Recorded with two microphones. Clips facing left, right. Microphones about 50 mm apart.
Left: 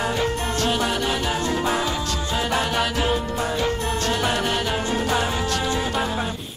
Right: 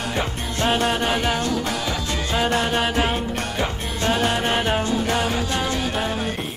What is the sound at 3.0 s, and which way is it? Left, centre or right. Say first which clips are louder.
Music: left 1 dB; right.